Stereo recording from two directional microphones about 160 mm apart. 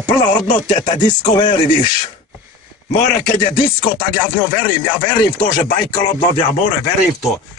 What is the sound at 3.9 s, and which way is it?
Music, 35° left (ahead or behind).